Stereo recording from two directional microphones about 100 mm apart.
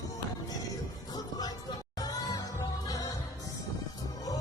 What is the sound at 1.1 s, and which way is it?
Music, 40° left (ahead or behind).